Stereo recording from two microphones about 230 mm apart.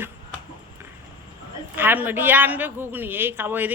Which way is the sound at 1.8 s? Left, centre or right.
Centre.